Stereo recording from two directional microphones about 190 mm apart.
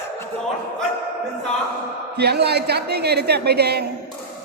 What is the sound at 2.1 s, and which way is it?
A woman's voice, 60° right (ahead or behind).